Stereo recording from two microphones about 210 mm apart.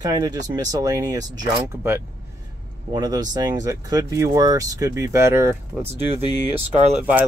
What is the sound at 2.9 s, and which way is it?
Speech, 20° right (ahead or behind).